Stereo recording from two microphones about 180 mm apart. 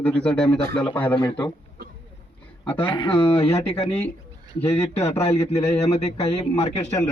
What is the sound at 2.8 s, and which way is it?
Speech, 25° left (ahead or behind).